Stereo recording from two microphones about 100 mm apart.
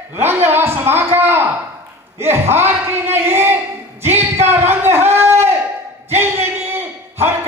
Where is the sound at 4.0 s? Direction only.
90° right.